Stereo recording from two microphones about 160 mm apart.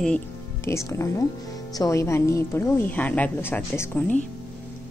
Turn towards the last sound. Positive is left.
turn(degrees=10)  # may be behind; listen again after turning